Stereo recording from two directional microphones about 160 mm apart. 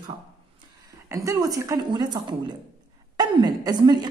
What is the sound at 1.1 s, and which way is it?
A woman's voice, 20° right (ahead or behind).